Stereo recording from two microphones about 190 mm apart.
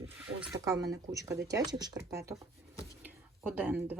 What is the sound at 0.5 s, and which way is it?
Speech, 15° right (ahead or behind).